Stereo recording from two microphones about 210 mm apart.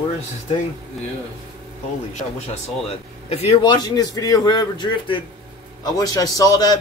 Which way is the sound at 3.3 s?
30° left (ahead or behind).